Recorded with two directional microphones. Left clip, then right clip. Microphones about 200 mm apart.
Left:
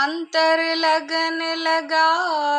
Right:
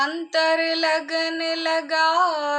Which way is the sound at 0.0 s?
5° left (ahead or behind).